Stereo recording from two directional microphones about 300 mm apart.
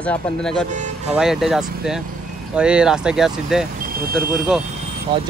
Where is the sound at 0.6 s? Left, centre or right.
Right.